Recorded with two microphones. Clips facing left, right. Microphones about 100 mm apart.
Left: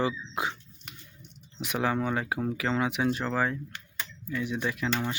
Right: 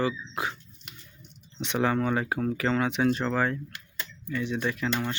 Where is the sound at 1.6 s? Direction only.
5° left (ahead or behind).